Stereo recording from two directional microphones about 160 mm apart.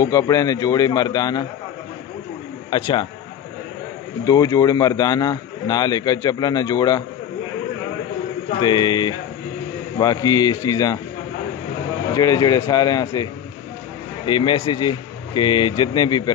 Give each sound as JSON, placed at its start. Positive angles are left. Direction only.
{"t": 0.0, "sound": "a man's voice", "side_deg": 20}
{"t": 2.7, "sound": "a man's voice", "side_deg": 30}
{"t": 4.2, "sound": "a man's voice", "side_deg": 20}
{"t": 8.5, "sound": "a man's voice", "side_deg": 30}
{"t": 12.1, "sound": "a man's voice", "side_deg": 20}